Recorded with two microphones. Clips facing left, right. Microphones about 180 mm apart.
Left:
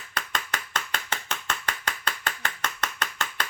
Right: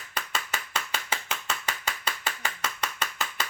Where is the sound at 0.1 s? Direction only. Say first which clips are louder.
Left 1 dB; 5° right (ahead or behind).